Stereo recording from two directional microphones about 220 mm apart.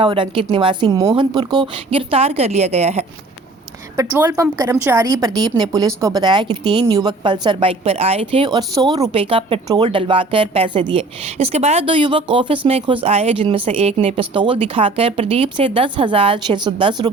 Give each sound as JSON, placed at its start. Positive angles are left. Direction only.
{"t": 0.0, "sound": "a woman's voice", "side_deg": -25}
{"t": 3.9, "sound": "a woman's voice", "side_deg": -15}